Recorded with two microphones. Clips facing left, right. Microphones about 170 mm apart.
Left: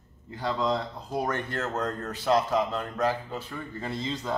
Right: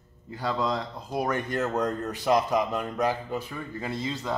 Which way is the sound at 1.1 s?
10° right (ahead or behind).